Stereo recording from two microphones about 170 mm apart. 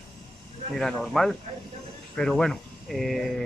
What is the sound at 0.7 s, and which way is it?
Speech, centre (ahead or behind).